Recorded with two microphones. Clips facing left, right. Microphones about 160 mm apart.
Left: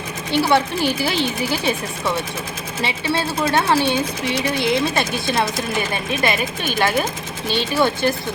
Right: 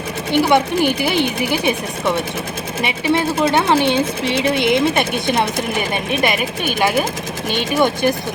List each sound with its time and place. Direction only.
0.4 s speech: 15° right (ahead or behind)
2.8 s speech: 20° right (ahead or behind)